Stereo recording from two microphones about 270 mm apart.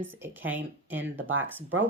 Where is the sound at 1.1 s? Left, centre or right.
Right.